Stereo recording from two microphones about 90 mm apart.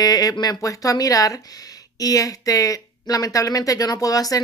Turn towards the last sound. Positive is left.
turn(degrees=40)  # may be behind; listen again after turning